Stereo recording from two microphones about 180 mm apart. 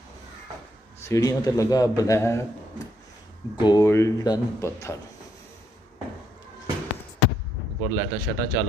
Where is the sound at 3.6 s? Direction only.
20° left (ahead or behind).